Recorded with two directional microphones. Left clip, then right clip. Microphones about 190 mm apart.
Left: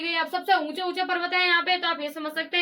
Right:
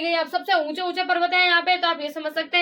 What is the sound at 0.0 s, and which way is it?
A woman's voice, 5° left (ahead or behind).